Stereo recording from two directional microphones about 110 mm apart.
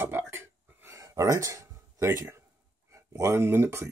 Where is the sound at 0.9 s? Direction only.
30° right (ahead or behind).